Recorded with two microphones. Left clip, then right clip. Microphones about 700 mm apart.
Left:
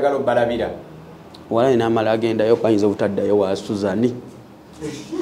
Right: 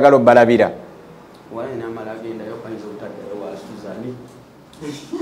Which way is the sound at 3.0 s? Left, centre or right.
Left.